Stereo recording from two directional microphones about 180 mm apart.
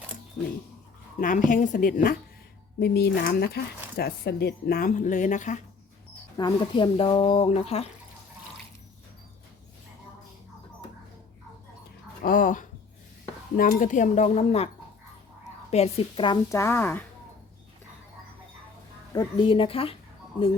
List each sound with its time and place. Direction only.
1.2 s speech: 45° left (ahead or behind)
2.8 s speech: 60° left (ahead or behind); by 5.6 s 45° left (ahead or behind)
6.3 s speech: 25° left (ahead or behind)
12.2 s speech: 50° left (ahead or behind)
15.7 s speech: 35° left (ahead or behind); by 17.0 s 10° left (ahead or behind)
19.1 s speech: 30° left (ahead or behind)